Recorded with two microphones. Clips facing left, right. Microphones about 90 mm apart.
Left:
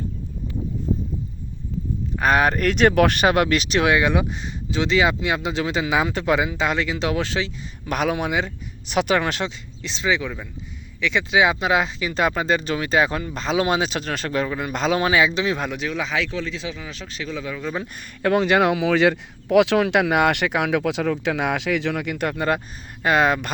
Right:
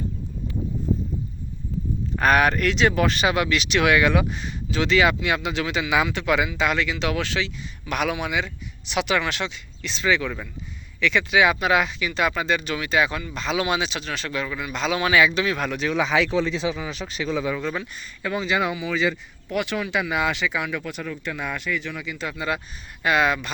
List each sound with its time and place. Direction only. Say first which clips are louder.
2.1 s speech: even; 20° left (ahead or behind); by 9.5 s 40° left (ahead or behind)
9.8 s speech: even; 20° left (ahead or behind)
15.9 s speech: right 6 dB; 5° right (ahead or behind)
16.3 s speech: right 5 dB; 20° right (ahead or behind)
16.8 s speech: right 4 dB; 10° right (ahead or behind)
17.9 s speech: left 8 dB; 60° left (ahead or behind)
23.0 s speech: left 2 dB; 40° left (ahead or behind)